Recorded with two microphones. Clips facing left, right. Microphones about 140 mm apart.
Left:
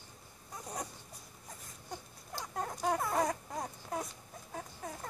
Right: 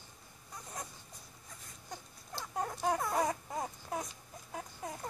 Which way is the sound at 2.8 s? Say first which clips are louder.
Left 1 dB; centre (ahead or behind).